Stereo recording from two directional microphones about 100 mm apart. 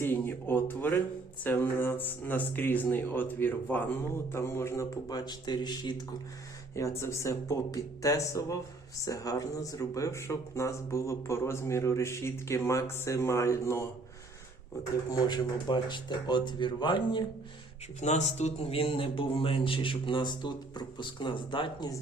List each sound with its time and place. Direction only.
0.0 s speech: 20° left (ahead or behind); by 5.9 s 45° left (ahead or behind)
6.7 s speech: 30° left (ahead or behind)
15.1 s speech: 45° left (ahead or behind)
18.3 s speech: 85° left; by 21.8 s 55° left (ahead or behind)